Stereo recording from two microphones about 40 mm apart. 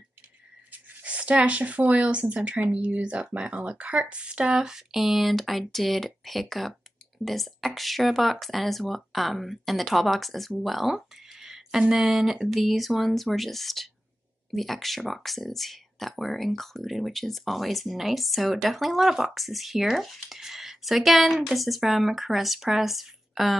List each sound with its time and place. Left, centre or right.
1.0 s speech: right; by 4.8 s centre
4.9 s speech: centre
10.6 s a sound: centre
12.0 s speech: centre